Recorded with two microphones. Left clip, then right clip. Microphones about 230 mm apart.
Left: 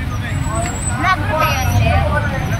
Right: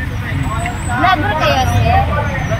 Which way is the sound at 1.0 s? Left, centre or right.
Right.